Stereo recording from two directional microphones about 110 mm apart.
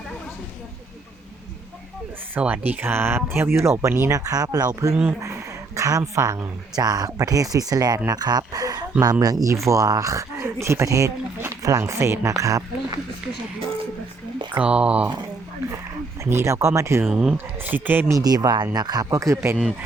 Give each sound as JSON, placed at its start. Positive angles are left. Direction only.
{"t": 2.3, "sound": "speech", "side_deg": -15}
{"t": 4.2, "sound": "speech", "side_deg": -35}
{"t": 14.6, "sound": "speech", "side_deg": -10}
{"t": 16.2, "sound": "speech", "side_deg": -25}
{"t": 17.1, "sound": "speech", "side_deg": -5}
{"t": 18.1, "sound": "speech", "side_deg": -35}